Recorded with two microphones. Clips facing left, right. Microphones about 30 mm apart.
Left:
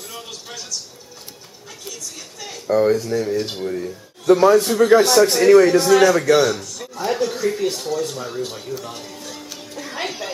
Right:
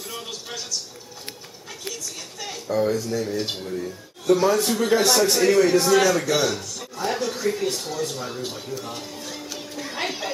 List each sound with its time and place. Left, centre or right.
0.1 s a sound: centre
2.6 s speech: left
3.0 s speech: centre
4.3 s speech: left
4.7 s speech: centre
6.6 s a sound: centre